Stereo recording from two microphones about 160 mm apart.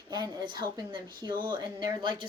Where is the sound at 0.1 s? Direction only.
25° right (ahead or behind).